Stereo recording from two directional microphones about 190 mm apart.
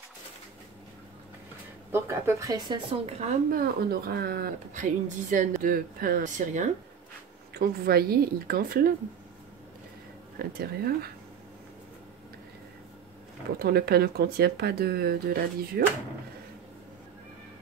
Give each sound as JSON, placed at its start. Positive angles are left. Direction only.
{"t": 1.9, "sound": "a woman's voice", "side_deg": -15}
{"t": 3.4, "sound": "a woman's voice", "side_deg": -50}
{"t": 7.5, "sound": "a woman's voice", "side_deg": -55}
{"t": 10.4, "sound": "a woman's voice", "side_deg": -55}
{"t": 13.6, "sound": "a woman's voice", "side_deg": -55}